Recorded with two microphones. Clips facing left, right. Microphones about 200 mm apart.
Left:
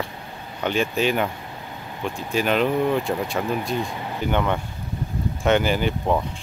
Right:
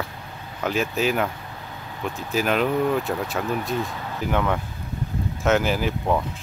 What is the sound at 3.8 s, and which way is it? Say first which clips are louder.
Speech: left 1 dB; 15° left (ahead or behind).